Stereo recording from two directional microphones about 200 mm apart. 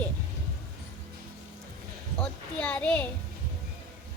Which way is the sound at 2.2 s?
10° left (ahead or behind).